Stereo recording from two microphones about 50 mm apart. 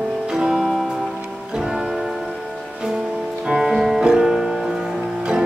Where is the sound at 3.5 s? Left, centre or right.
Centre.